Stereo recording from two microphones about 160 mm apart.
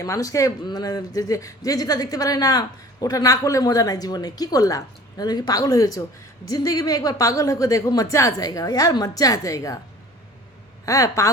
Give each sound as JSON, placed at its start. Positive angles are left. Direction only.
{"t": 0.0, "sound": "a man's voice", "side_deg": 20}
{"t": 10.8, "sound": "a man's voice", "side_deg": 20}